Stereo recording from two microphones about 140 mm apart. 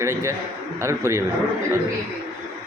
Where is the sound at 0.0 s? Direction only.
20° right (ahead or behind).